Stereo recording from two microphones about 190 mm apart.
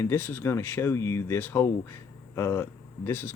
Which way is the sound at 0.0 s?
10° left (ahead or behind).